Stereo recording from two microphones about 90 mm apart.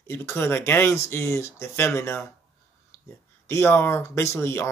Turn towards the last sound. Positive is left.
turn(degrees=30)  # may be behind; listen again after turning